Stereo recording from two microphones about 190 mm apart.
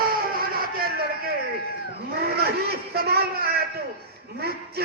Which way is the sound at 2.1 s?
55° right (ahead or behind).